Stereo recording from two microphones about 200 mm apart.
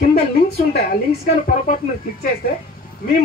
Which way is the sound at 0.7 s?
50° left (ahead or behind).